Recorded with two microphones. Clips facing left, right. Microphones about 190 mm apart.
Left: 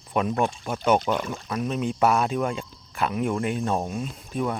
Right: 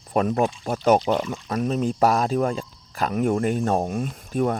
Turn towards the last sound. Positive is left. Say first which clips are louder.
# right 4 dB
turn(degrees=-45)  # may be behind; listen again after turning